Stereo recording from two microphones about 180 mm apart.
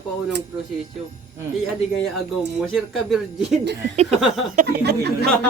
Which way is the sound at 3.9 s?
40° right (ahead or behind).